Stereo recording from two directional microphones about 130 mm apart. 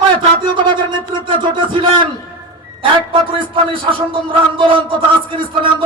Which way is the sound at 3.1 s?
40° right (ahead or behind).